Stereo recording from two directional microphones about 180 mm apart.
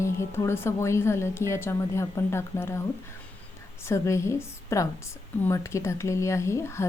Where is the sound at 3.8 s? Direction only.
15° left (ahead or behind).